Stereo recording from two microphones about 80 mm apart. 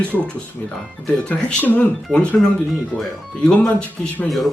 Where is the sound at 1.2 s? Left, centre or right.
Centre.